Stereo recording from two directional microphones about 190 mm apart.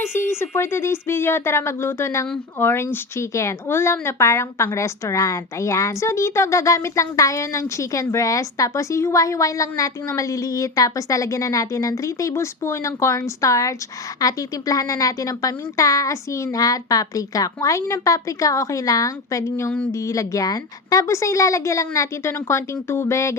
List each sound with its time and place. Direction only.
0.3 s speech: 15° left (ahead or behind)